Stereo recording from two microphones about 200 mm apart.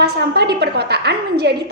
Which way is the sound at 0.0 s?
55° right (ahead or behind).